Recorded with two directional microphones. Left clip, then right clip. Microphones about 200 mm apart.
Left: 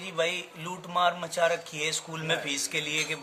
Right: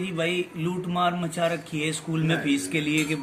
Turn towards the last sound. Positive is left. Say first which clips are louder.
# right 4 dB
turn(degrees=45)  # may be behind; listen again after turning